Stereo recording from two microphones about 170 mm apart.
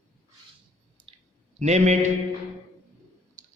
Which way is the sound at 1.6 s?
40° right (ahead or behind).